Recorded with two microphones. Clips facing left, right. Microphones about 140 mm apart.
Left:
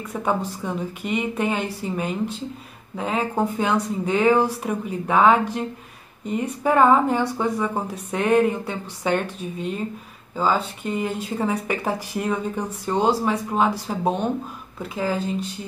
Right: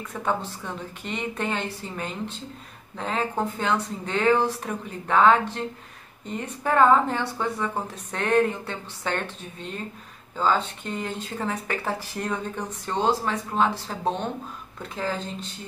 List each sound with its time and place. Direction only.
0.1 s speech: 10° left (ahead or behind)